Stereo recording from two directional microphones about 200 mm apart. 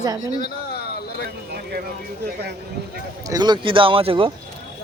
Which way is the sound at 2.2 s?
55° right (ahead or behind).